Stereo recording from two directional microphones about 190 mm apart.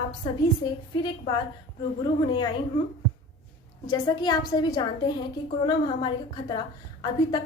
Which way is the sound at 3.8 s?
20° left (ahead or behind).